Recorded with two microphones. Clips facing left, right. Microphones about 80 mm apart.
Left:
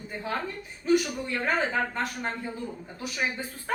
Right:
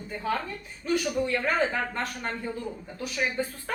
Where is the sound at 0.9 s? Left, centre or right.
Centre.